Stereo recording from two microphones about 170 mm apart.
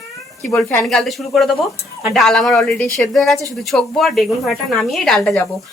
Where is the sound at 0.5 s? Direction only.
5° left (ahead or behind).